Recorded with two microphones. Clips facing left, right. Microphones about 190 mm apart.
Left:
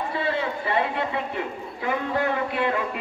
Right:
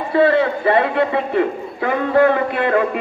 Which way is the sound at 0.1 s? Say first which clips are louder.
Right 16 dB; 70° right (ahead or behind).